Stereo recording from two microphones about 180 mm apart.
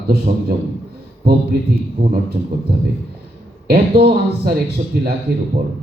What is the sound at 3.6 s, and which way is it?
A man's voice, 60° right (ahead or behind).